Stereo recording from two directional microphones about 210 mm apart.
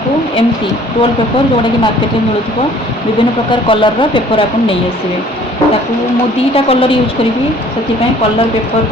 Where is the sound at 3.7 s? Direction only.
25° left (ahead or behind).